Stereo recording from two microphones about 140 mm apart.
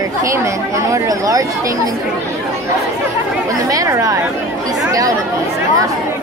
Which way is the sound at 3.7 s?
25° right (ahead or behind).